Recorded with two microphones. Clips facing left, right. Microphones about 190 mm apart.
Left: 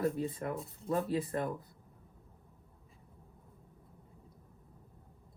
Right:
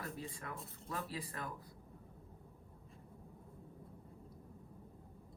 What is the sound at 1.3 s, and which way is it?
Speech, 30° left (ahead or behind).